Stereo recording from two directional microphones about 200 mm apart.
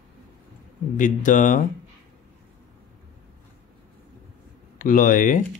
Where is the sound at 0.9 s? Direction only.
40° left (ahead or behind).